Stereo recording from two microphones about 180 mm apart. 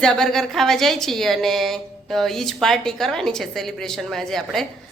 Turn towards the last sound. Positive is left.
turn(degrees=0)  # may be behind; listen again after turning